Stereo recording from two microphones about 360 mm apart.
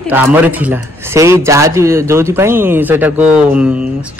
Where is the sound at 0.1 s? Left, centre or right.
Centre.